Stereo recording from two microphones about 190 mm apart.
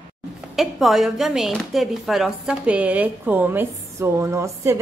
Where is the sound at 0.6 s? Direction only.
Centre (ahead or behind).